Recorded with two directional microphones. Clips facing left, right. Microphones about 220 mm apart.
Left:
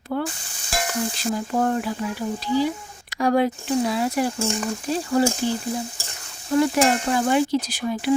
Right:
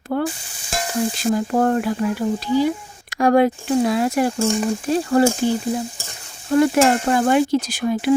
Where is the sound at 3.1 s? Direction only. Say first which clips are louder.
Right 5 dB; 50° right (ahead or behind).